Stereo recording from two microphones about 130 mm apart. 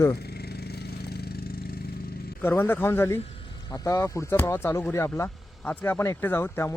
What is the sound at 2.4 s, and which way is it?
Speech, 20° left (ahead or behind).